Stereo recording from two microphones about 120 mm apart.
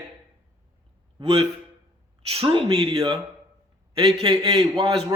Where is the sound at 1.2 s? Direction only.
55° right (ahead or behind).